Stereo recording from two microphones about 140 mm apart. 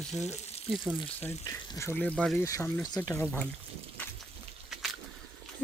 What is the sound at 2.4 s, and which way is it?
Speech, 20° left (ahead or behind).